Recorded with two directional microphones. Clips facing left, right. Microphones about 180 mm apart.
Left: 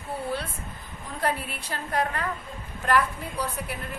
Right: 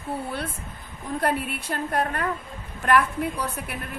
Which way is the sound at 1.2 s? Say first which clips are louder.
Right 2 dB; 50° right (ahead or behind).